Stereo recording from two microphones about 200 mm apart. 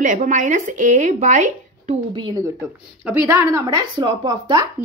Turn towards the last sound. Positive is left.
turn(degrees=-20)  # may be behind; listen again after turning